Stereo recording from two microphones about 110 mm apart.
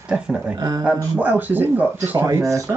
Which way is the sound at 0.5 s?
30° right (ahead or behind).